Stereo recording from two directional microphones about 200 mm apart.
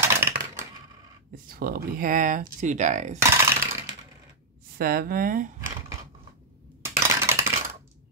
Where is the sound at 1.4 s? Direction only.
45° right (ahead or behind).